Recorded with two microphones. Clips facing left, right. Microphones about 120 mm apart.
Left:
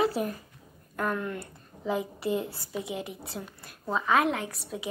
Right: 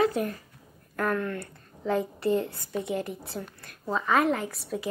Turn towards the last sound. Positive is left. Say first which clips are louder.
# right 3 dB
turn(degrees=0)  # may be behind; listen again after turning